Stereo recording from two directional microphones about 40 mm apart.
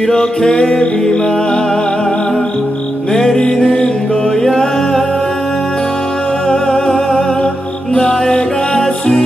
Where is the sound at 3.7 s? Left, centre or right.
Left.